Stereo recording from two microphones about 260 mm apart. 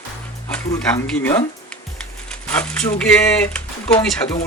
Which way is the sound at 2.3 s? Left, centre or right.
Centre.